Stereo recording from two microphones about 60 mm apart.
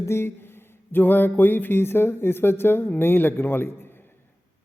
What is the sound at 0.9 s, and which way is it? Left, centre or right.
Speech, left.